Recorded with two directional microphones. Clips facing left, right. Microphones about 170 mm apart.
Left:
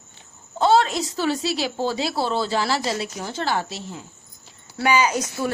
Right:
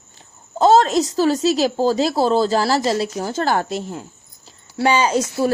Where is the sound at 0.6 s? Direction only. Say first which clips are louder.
Right 5 dB; 40° right (ahead or behind).